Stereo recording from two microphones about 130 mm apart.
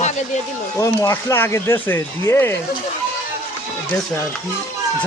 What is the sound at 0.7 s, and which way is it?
Speech, 25° left (ahead or behind).